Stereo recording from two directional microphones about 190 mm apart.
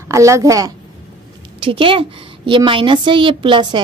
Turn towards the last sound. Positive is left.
turn(degrees=-25)  # may be behind; listen again after turning